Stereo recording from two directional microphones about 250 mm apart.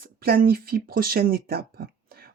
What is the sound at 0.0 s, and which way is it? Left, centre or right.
Speech, right.